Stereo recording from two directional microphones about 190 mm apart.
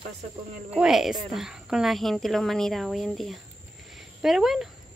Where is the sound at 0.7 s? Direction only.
5° right (ahead or behind).